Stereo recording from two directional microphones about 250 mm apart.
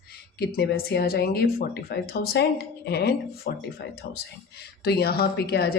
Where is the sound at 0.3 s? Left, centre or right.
Left.